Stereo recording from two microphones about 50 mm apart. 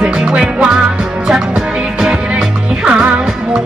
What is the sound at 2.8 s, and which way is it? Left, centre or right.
Music, right.